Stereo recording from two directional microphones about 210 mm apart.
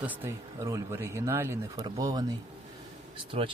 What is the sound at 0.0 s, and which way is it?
Speech, 10° right (ahead or behind).